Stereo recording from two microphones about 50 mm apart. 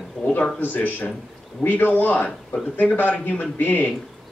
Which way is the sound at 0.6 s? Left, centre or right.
Left.